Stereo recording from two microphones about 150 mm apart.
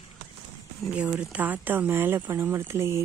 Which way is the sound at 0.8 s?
10° right (ahead or behind).